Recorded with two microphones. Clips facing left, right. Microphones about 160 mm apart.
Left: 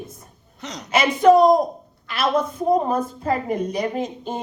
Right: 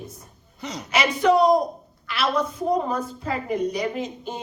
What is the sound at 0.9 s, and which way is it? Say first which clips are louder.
Speech: left 5 dB; 50° left (ahead or behind).